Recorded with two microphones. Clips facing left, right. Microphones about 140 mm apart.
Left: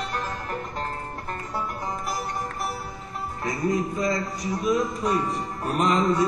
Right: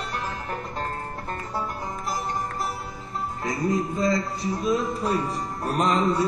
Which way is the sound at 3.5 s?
25° right (ahead or behind).